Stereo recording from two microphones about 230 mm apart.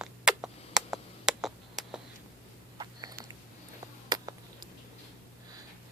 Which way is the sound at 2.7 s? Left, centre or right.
Centre.